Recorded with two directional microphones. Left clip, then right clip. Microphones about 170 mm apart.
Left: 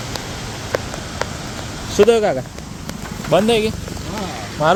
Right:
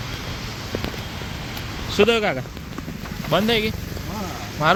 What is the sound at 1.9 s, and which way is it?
Speech, 5° right (ahead or behind).